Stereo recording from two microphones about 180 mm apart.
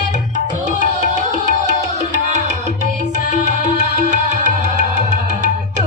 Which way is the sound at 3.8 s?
40° right (ahead or behind).